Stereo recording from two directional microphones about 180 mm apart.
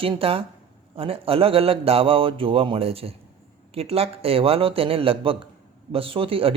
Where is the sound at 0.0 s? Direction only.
30° right (ahead or behind).